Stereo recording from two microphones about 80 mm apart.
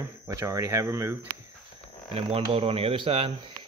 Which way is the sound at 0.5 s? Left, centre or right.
Right.